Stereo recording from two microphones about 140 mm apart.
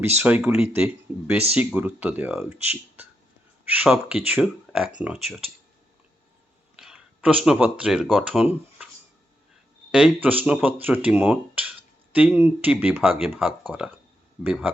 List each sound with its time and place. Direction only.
0.0 s speech: 15° right (ahead or behind)
6.7 s speech: 5° right (ahead or behind)
9.9 s speech: 10° right (ahead or behind)